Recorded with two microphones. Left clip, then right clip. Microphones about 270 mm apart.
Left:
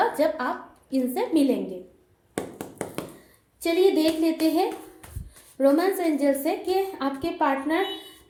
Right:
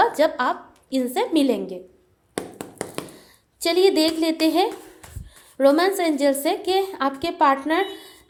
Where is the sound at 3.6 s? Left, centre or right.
Right.